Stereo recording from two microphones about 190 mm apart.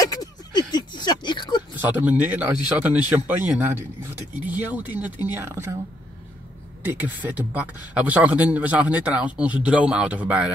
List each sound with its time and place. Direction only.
0.0 s a sound: 20° left (ahead or behind)
1.8 s a man's voice: 10° right (ahead or behind)
6.8 s a man's voice: 10° right (ahead or behind)